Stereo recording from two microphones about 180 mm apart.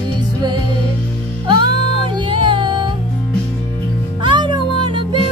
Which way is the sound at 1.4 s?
25° right (ahead or behind).